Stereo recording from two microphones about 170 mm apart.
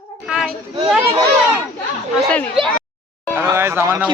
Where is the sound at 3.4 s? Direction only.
15° right (ahead or behind).